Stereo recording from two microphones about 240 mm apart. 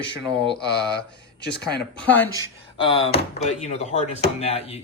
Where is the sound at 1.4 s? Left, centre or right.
Left.